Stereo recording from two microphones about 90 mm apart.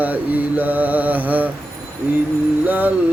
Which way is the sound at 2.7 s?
20° right (ahead or behind).